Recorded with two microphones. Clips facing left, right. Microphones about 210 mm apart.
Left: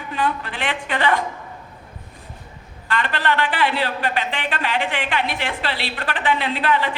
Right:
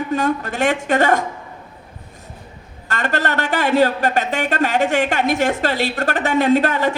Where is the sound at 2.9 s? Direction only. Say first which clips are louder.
Right 1 dB; 45° right (ahead or behind).